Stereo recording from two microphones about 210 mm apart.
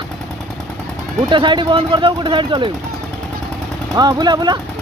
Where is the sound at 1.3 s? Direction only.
20° right (ahead or behind).